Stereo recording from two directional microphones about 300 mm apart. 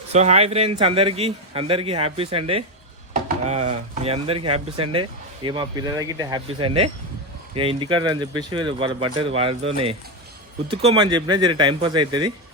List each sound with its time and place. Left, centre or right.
0.1 s a man's voice: right